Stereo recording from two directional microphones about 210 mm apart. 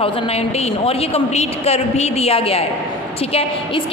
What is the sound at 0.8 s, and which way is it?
A woman's voice, 30° left (ahead or behind).